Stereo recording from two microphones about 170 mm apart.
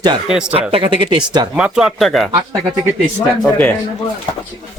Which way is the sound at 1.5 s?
5° right (ahead or behind).